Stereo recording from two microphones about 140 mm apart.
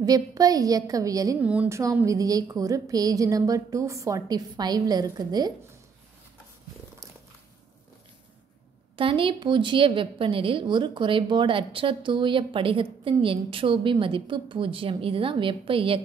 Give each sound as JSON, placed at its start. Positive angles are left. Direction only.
{"t": 0.0, "sound": "a woman's voice", "side_deg": -25}
{"t": 1.4, "sound": "speech", "side_deg": -10}
{"t": 1.8, "sound": "a woman's voice", "side_deg": -25}
{"t": 8.9, "sound": "a woman's voice", "side_deg": -40}